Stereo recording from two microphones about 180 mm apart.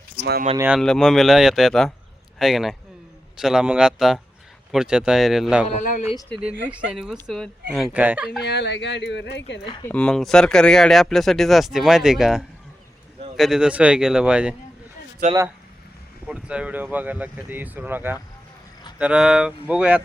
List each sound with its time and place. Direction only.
0.7 s speech: centre (ahead or behind)
5.6 s speech: 45° left (ahead or behind)
6.7 s speech: 5° right (ahead or behind)
8.4 s speech: 70° left (ahead or behind)
9.8 s speech: 5° left (ahead or behind)
16.2 s speech: 5° right (ahead or behind)